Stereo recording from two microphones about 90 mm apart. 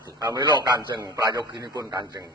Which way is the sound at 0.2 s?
50° right (ahead or behind).